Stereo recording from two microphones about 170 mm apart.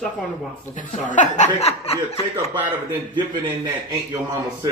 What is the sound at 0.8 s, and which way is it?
Speech, 50° left (ahead or behind).